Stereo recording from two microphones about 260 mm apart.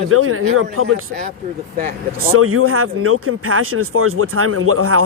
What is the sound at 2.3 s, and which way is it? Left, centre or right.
Speech, right.